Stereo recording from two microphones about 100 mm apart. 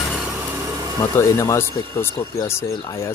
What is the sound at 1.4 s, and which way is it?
Speech, 25° left (ahead or behind).